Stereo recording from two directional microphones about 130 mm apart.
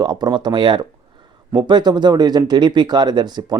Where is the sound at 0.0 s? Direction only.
35° right (ahead or behind).